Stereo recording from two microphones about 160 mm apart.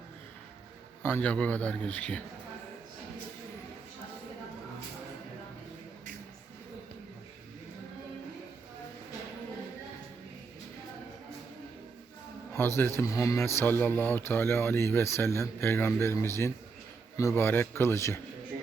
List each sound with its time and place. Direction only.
1.0 s speech: 10° left (ahead or behind)
12.5 s speech: 15° left (ahead or behind)